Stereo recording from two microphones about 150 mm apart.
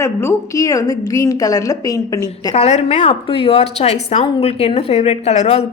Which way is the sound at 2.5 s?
45° left (ahead or behind).